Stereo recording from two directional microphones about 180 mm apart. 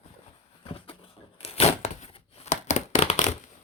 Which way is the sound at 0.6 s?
30° left (ahead or behind).